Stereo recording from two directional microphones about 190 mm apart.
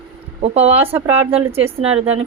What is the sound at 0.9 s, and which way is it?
Speech, 10° right (ahead or behind).